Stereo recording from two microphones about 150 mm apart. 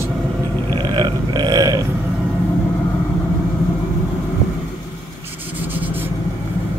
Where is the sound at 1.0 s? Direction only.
25° right (ahead or behind).